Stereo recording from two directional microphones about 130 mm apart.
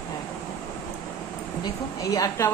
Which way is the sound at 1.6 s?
25° left (ahead or behind).